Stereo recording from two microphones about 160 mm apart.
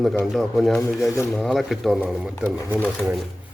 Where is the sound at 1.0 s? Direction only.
20° left (ahead or behind).